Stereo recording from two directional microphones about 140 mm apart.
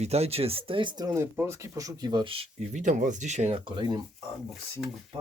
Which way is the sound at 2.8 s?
60° right (ahead or behind).